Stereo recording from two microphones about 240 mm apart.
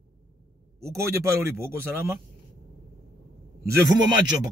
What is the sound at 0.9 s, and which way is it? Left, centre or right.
A man's voice, centre.